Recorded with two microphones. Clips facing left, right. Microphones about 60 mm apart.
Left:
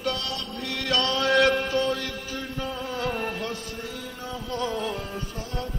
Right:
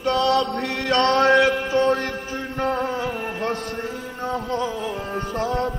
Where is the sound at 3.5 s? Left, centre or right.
Right.